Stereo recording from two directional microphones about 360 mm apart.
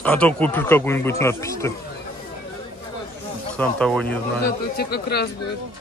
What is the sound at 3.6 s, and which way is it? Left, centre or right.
Speech, centre.